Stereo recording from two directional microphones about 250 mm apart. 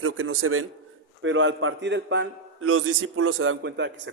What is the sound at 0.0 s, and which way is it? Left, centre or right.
A man's voice, right.